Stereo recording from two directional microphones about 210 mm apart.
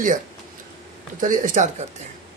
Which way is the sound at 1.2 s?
40° right (ahead or behind).